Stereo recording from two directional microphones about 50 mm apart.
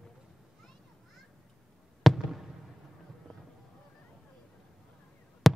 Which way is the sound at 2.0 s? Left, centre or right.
Centre.